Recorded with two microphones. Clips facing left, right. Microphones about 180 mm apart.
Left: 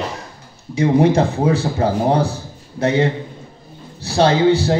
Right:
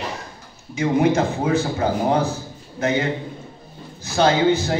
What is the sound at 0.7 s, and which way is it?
A man's voice, 35° left (ahead or behind).